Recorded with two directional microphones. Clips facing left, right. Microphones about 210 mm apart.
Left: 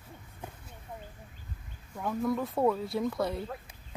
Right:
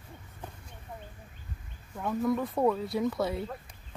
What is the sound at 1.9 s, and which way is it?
Speech, centre (ahead or behind).